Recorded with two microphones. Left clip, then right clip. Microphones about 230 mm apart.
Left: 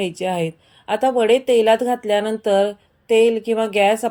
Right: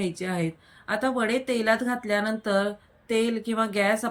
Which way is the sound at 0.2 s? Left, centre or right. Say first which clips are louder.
Left 8 dB; right.